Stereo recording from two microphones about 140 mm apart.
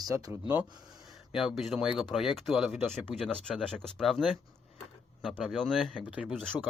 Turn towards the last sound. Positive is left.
turn(degrees=5)  # may be behind; listen again after turning